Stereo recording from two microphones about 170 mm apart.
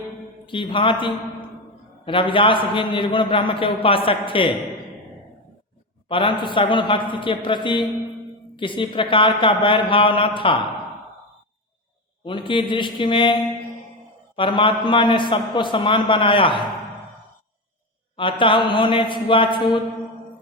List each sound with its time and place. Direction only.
0.4 s a man's voice: 30° left (ahead or behind)
6.1 s a man's voice: 30° left (ahead or behind)
12.2 s a man's voice: 30° left (ahead or behind)
14.3 s a man's voice: 30° left (ahead or behind)
18.2 s a man's voice: 30° left (ahead or behind)